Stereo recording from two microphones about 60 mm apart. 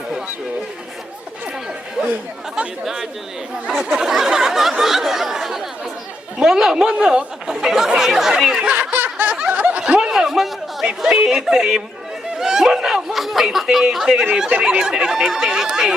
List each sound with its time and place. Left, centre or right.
2.0 s chatter: centre
2.8 s speech: centre
4.8 s a sound: centre
6.4 s speech: centre
8.7 s snicker: right
10.1 s chatter: centre
11.0 s speech: centre